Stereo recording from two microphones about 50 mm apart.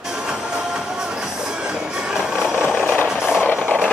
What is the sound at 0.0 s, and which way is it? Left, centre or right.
Music, centre.